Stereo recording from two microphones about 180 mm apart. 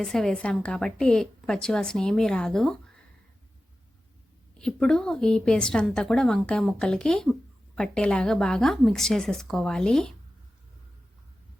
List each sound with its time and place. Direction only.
0.0 s a woman's voice: centre (ahead or behind)
4.5 s a woman's voice: 5° left (ahead or behind)